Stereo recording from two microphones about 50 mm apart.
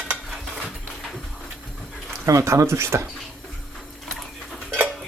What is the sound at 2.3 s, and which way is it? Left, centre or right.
Speech, right.